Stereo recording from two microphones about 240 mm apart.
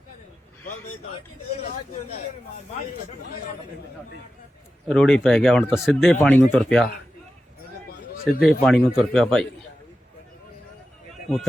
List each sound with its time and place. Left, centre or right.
1.5 s speech: left
4.9 s speech: centre
8.2 s speech: centre